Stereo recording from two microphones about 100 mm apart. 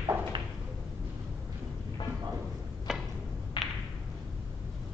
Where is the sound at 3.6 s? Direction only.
50° left (ahead or behind).